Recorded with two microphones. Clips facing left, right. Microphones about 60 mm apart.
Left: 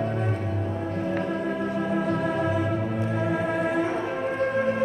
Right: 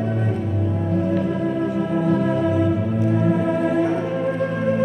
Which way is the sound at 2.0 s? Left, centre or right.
Left.